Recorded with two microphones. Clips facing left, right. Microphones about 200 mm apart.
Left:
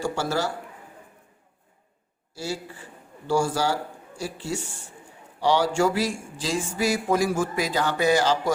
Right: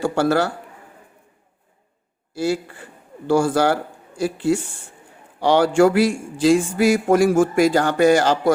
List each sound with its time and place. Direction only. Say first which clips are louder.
0.0 s speech: right 7 dB; 60° right (ahead or behind)
2.4 s a man's voice: right 10 dB; 60° right (ahead or behind)